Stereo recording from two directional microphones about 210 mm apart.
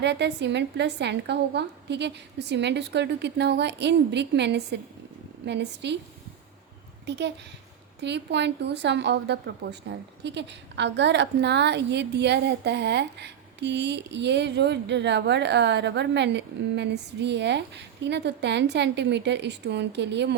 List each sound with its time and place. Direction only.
0.0 s a woman's voice: 55° right (ahead or behind)
7.0 s a woman's voice: 55° right (ahead or behind)